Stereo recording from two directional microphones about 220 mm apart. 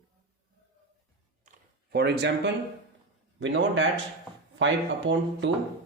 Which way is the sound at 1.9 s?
50° right (ahead or behind).